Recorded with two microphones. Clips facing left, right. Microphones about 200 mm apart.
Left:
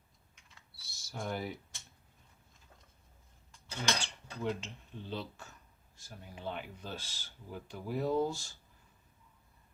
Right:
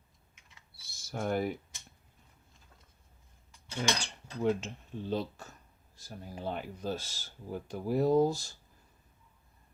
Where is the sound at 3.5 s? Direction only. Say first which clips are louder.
Right 3 dB; 10° right (ahead or behind).